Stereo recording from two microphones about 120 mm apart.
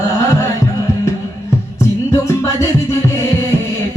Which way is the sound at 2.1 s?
25° left (ahead or behind).